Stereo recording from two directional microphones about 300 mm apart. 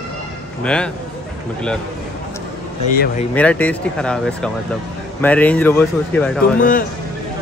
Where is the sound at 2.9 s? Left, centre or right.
Left.